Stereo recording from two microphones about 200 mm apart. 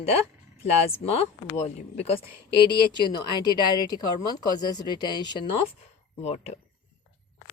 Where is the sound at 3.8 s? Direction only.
20° left (ahead or behind).